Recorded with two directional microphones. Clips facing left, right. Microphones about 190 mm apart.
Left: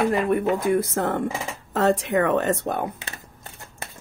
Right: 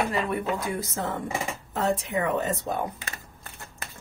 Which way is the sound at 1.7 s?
75° left (ahead or behind).